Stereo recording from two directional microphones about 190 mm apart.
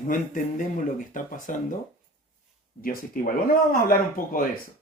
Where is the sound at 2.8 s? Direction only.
50° left (ahead or behind).